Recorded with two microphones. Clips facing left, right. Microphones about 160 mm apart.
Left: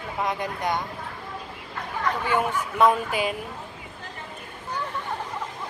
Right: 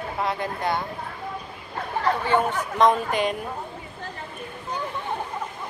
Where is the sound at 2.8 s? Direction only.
5° left (ahead or behind).